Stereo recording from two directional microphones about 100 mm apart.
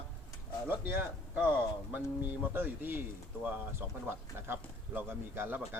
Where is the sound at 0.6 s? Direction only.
20° right (ahead or behind).